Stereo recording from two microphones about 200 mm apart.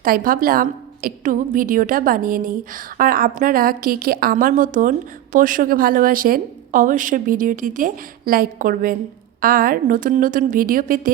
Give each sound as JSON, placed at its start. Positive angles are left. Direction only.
{"t": 0.0, "sound": "a woman's voice", "side_deg": -45}